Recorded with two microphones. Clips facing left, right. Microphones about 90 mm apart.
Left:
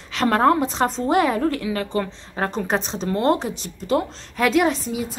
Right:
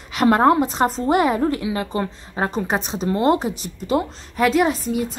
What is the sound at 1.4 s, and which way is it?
A woman's voice, 15° right (ahead or behind).